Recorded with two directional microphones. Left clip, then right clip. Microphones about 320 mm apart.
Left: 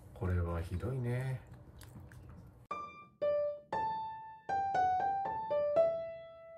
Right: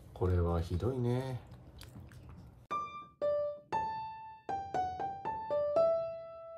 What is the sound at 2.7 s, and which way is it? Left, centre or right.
Music, centre.